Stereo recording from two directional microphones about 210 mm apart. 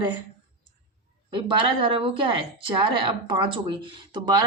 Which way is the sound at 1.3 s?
25° right (ahead or behind).